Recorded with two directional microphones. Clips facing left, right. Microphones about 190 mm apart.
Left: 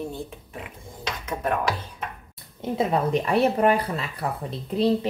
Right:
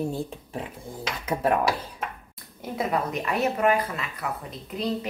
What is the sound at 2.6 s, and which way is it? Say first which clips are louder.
Speech: left 4 dB; 30° left (ahead or behind).